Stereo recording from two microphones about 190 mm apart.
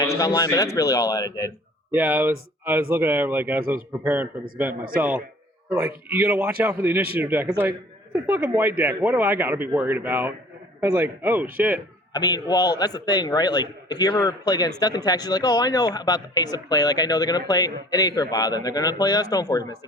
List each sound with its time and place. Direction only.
0.0 s speech: 20° left (ahead or behind)
1.9 s speech: 10° right (ahead or behind)
4.7 s a man's voice: 50° right (ahead or behind)
4.9 s speech: 10° right (ahead or behind)
12.1 s speech: 20° left (ahead or behind)